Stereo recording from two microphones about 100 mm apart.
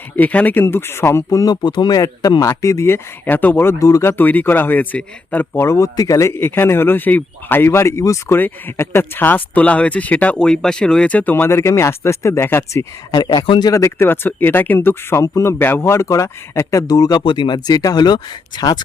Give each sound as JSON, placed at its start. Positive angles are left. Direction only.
{"t": 0.2, "sound": "speech", "side_deg": 15}
{"t": 4.2, "sound": "speech", "side_deg": 20}
{"t": 5.6, "sound": "speech", "side_deg": 30}
{"t": 13.1, "sound": "speech", "side_deg": 40}
{"t": 17.2, "sound": "speech", "side_deg": 50}